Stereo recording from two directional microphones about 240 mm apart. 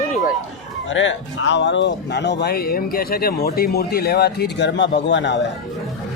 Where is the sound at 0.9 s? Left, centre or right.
Left.